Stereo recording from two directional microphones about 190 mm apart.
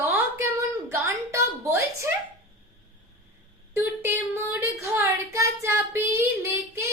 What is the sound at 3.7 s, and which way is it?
Speech, 15° right (ahead or behind).